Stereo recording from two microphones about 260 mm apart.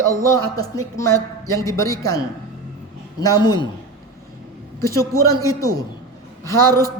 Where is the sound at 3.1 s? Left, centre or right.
Centre.